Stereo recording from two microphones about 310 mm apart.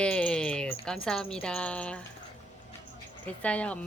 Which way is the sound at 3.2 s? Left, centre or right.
Centre.